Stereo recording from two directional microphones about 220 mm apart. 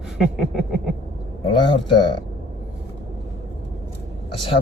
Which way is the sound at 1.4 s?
20° left (ahead or behind).